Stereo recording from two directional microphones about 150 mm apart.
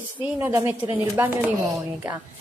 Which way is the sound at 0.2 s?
15° right (ahead or behind).